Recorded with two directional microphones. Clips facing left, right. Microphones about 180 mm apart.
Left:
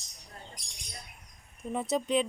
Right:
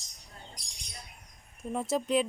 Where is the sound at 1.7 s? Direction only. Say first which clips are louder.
Even; centre (ahead or behind).